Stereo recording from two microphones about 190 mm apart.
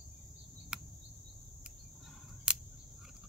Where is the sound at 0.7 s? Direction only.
5° right (ahead or behind).